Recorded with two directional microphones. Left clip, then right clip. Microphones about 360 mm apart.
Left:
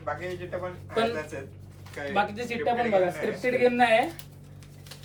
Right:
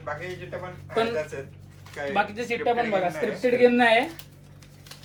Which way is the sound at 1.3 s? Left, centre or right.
Centre.